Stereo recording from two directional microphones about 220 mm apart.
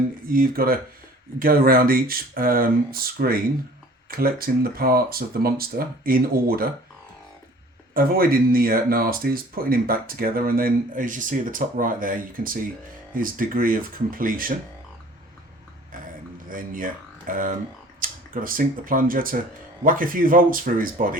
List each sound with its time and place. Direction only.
0.3 s speech: 40° right (ahead or behind)
7.9 s speech: 40° right (ahead or behind)
16.5 s speech: 40° right (ahead or behind)